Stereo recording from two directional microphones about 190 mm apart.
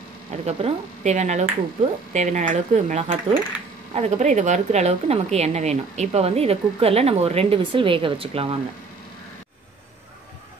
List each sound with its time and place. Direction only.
0.5 s speech: 35° right (ahead or behind)